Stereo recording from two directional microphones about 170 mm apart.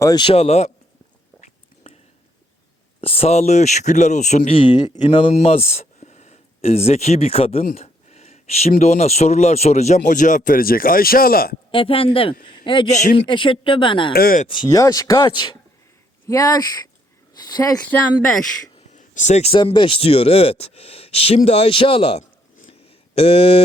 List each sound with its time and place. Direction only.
0.0 s speech: 25° left (ahead or behind)
1.4 s a sound: 40° left (ahead or behind)
3.0 s speech: 35° left (ahead or behind)
7.8 s a sound: 40° left (ahead or behind)
8.8 s speech: 40° left (ahead or behind); by 11.5 s 60° left (ahead or behind)
11.7 s a man's voice: 30° left (ahead or behind)
12.9 s speech: 45° left (ahead or behind)
13.2 s speech: 30° left (ahead or behind)
14.1 s speech: 60° left (ahead or behind)
14.4 s speech: 30° left (ahead or behind)
18.9 s speech: 45° left (ahead or behind)
22.6 s a sound: 35° left (ahead or behind)